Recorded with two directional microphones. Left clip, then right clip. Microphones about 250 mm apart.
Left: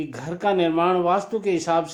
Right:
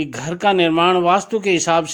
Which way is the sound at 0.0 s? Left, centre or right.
Right.